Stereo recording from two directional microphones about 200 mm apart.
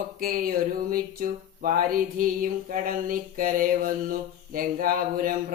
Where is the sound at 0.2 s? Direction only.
45° right (ahead or behind).